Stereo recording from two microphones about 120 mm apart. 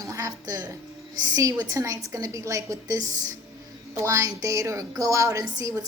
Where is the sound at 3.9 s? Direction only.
25° right (ahead or behind).